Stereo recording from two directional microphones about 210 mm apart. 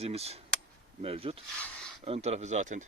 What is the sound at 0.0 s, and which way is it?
Speech, 30° right (ahead or behind).